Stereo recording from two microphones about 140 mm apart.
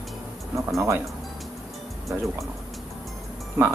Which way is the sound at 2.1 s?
15° right (ahead or behind).